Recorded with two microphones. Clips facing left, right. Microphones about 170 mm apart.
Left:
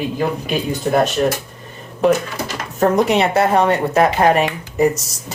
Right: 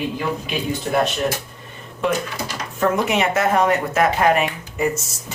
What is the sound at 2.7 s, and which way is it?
Speech, 40° left (ahead or behind).